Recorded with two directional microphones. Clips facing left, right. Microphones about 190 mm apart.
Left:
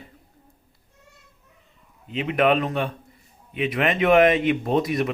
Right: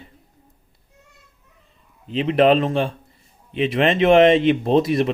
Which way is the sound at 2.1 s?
30° right (ahead or behind).